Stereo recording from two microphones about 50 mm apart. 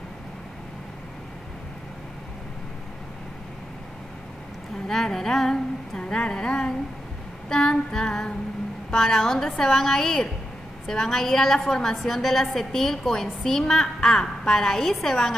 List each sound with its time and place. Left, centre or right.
4.8 s a woman's voice: centre